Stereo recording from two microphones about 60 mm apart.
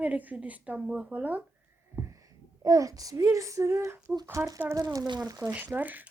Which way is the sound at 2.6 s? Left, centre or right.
Right.